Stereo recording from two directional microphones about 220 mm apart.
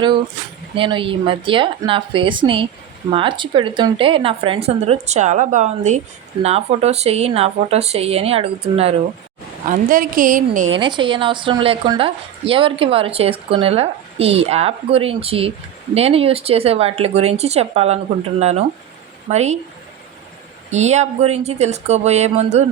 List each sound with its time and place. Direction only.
0.8 s a woman's voice: 25° right (ahead or behind)
9.6 s speech: 40° right (ahead or behind)
10.8 s a woman's voice: 20° right (ahead or behind)
20.7 s speech: 30° right (ahead or behind)